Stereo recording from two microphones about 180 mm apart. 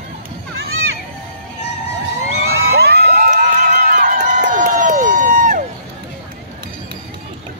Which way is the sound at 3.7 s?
45° right (ahead or behind).